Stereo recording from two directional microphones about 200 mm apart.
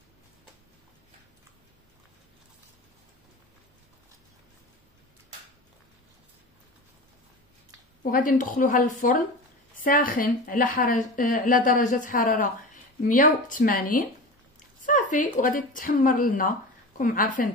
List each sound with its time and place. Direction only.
8.0 s a woman's voice: 45° left (ahead or behind)